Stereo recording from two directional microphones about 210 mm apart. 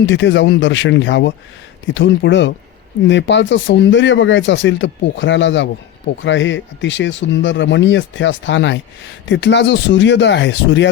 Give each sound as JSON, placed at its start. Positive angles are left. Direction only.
{"t": 0.0, "sound": "speech", "side_deg": 60}